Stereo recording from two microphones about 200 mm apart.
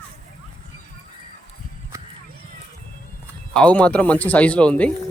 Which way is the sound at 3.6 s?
5° left (ahead or behind).